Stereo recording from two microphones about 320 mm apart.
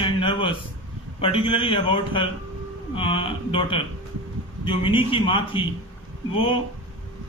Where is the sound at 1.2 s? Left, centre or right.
Centre.